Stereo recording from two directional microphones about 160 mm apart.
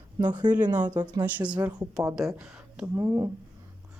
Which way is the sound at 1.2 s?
10° right (ahead or behind).